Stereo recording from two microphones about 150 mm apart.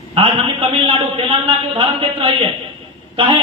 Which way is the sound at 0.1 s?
35° right (ahead or behind).